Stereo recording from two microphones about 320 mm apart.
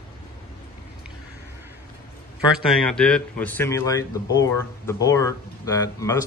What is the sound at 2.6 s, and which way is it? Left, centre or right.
Speech, centre.